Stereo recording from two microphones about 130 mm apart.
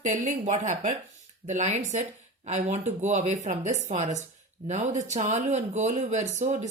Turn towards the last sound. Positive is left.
turn(degrees=-65)  # may be behind; listen again after turning